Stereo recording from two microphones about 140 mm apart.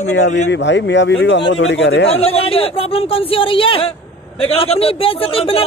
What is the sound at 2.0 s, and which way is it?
A man's voice, 45° left (ahead or behind).